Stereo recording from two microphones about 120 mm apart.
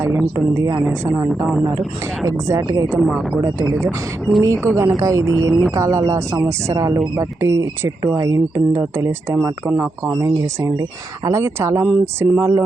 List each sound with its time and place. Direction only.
0.0 s speech: 20° right (ahead or behind)
0.6 s speech: 30° right (ahead or behind)
0.9 s a woman's voice: 10° right (ahead or behind)
2.2 s speech: 25° right (ahead or behind)
3.8 s speech: centre (ahead or behind)
4.6 s speech: 25° right (ahead or behind)
5.5 s speech: 5° right (ahead or behind)
5.7 s a woman's voice: 25° right (ahead or behind)